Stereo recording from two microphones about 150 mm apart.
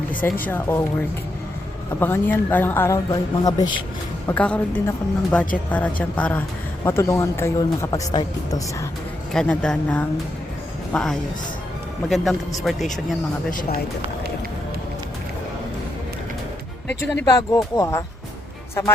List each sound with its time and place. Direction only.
0.1 s speech: 10° left (ahead or behind)
2.0 s speech: 15° left (ahead or behind)
4.3 s speech: 10° left (ahead or behind)
9.3 s a man's voice: 5° left (ahead or behind)
13.5 s speech: 65° left (ahead or behind)
17.0 s speech: 15° left (ahead or behind)